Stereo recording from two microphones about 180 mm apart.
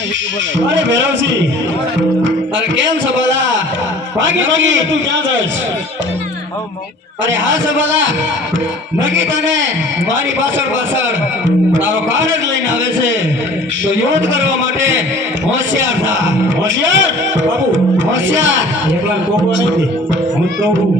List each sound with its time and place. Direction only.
0.7 s a man's voice: 90° right
4.2 s a man's voice: 90° right
7.3 s a man's voice: 90° right
11.7 s a man's voice: 90° right
13.8 s a man's voice: 90° right
18.3 s a man's voice: 90° right